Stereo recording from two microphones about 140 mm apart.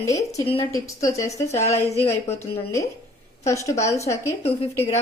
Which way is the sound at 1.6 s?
50° left (ahead or behind).